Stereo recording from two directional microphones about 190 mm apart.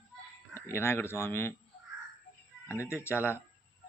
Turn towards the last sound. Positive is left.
turn(degrees=10)  # may be behind; listen again after turning